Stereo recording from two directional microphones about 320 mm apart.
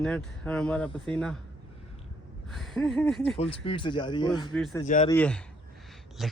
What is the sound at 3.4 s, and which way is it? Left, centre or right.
Speech, centre.